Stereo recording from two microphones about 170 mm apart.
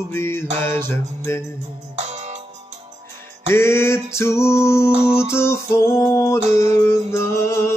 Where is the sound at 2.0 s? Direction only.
40° right (ahead or behind).